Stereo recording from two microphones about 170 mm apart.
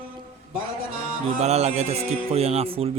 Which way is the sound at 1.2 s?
40° right (ahead or behind).